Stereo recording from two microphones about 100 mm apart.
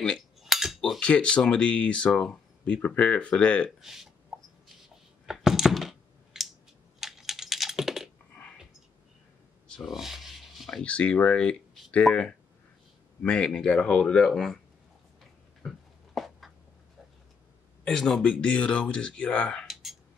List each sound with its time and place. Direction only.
0.4 s a sound: centre (ahead or behind)
0.7 s speech: 10° left (ahead or behind)
3.8 s speech: 5° right (ahead or behind)
4.8 s a sound: 5° right (ahead or behind)
7.0 s typing: centre (ahead or behind)
9.7 s rub: centre (ahead or behind)
10.8 s speech: 10° left (ahead or behind)
15.6 s a sound: 5° right (ahead or behind)
17.8 s speech: 5° left (ahead or behind)